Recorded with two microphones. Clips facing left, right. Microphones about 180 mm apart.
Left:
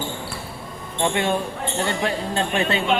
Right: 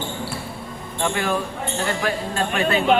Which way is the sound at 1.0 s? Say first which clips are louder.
Left 1 dB; 25° left (ahead or behind).